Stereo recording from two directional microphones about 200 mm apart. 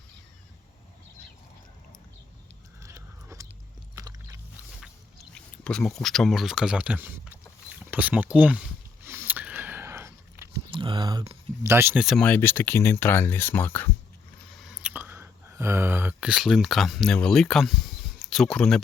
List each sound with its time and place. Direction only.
2.8 s a sound: 15° right (ahead or behind)
3.9 s chewing: 15° right (ahead or behind)
5.3 s speech: 5° left (ahead or behind)
9.0 s a sound: 10° right (ahead or behind)
10.7 s a sound: 25° right (ahead or behind)
11.6 s speech: 10° right (ahead or behind)
12.0 s speech: 5° left (ahead or behind)
14.5 s whispering: centre (ahead or behind)
18.3 s speech: 5° left (ahead or behind)